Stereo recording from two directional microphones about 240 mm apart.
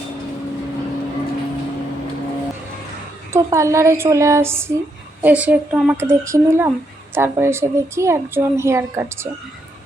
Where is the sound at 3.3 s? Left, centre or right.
Centre.